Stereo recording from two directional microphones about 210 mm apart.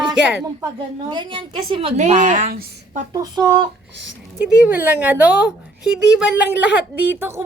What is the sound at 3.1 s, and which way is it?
Speech, 20° right (ahead or behind).